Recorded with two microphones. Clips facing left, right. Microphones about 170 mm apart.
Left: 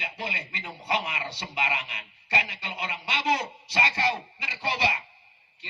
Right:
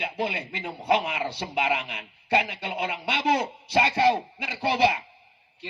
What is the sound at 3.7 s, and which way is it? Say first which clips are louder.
Speech: right 7 dB; 55° right (ahead or behind).